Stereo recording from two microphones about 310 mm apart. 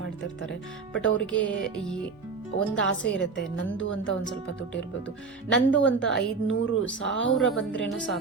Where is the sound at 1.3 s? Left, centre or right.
Centre.